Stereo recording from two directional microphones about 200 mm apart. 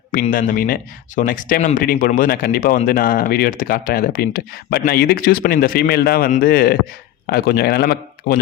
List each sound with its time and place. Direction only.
0.1 s speech: 45° left (ahead or behind)